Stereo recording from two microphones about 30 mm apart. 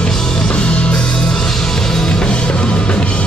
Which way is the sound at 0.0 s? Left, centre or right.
Left.